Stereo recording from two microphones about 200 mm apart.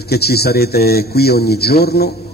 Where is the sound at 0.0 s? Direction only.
55° left (ahead or behind).